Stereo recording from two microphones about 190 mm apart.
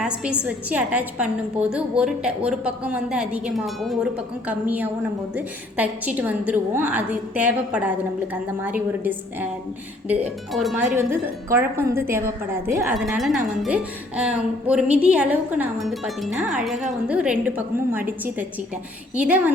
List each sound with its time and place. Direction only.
0.0 s a woman's voice: 5° right (ahead or behind)
12.9 s a woman's voice: centre (ahead or behind)